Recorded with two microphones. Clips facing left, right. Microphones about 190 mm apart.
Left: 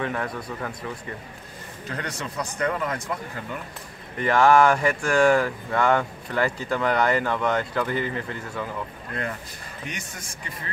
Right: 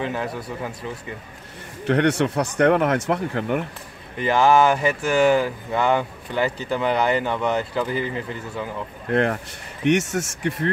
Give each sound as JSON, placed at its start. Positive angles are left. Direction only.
{"t": 0.0, "sound": "speech", "side_deg": -25}
{"t": 0.3, "sound": "speech", "side_deg": -5}
{"t": 1.9, "sound": "speech", "side_deg": -75}
{"t": 4.3, "sound": "speech", "side_deg": -5}
{"t": 6.8, "sound": "speech", "side_deg": -25}
{"t": 7.2, "sound": "speech", "side_deg": -5}
{"t": 9.1, "sound": "speech", "side_deg": -70}